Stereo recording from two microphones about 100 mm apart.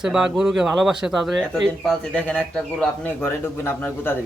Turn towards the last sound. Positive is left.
turn(degrees=20)  # may be behind; listen again after turning